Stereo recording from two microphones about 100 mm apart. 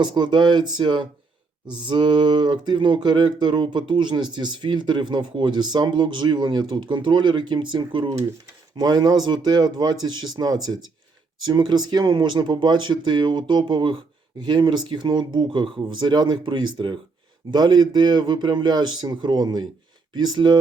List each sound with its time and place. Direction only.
0.0 s speech: 50° right (ahead or behind)